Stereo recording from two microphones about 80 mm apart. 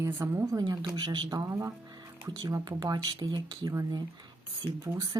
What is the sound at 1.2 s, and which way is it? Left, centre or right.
Speech, right.